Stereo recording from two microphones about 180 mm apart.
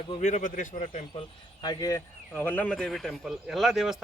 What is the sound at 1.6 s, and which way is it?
Speech, 20° left (ahead or behind).